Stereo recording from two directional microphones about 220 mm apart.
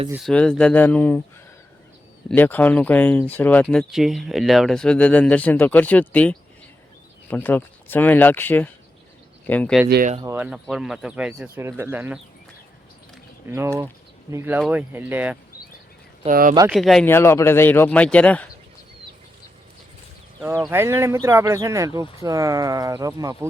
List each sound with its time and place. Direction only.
0.1 s speech: centre (ahead or behind)
2.3 s speech: 10° left (ahead or behind)
9.9 s speech: 40° right (ahead or behind)
10.2 s speech: 10° right (ahead or behind)
13.5 s speech: 15° right (ahead or behind)
16.2 s speech: 40° right (ahead or behind)
16.7 s speech: centre (ahead or behind)
20.6 s speech: 10° right (ahead or behind)